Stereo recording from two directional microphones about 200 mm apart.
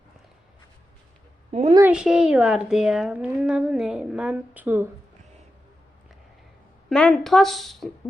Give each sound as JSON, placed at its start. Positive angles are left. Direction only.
{"t": 1.5, "sound": "a woman's voice", "side_deg": -35}
{"t": 1.8, "sound": "a woman's voice", "side_deg": -5}
{"t": 6.9, "sound": "a woman's voice", "side_deg": 5}